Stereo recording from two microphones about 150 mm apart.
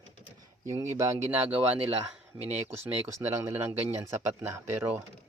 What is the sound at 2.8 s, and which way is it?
Speech, 15° right (ahead or behind).